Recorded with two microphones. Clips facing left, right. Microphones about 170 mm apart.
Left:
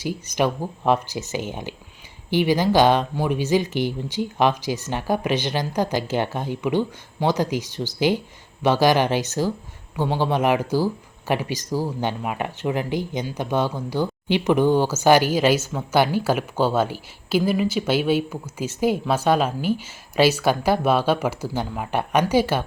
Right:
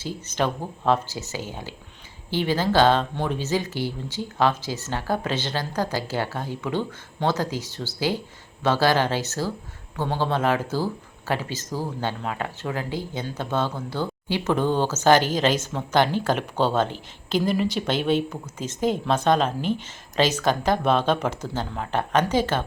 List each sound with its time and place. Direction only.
0.0 s speech: 10° left (ahead or behind)